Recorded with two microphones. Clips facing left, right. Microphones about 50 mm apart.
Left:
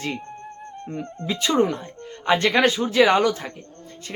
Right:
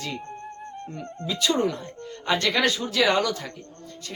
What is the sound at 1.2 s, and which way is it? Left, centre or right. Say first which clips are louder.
Speech: left 3 dB; left.